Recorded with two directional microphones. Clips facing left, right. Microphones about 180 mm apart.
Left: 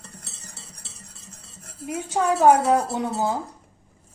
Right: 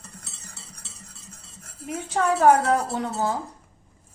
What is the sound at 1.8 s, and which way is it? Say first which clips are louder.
Dishes: left 1 dB; 10° left (ahead or behind).